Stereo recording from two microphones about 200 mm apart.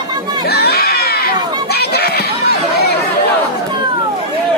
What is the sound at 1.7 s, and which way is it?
Chatter, 55° left (ahead or behind).